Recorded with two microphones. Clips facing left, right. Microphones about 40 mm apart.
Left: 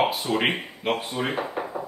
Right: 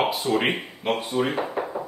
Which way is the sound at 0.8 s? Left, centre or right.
Centre.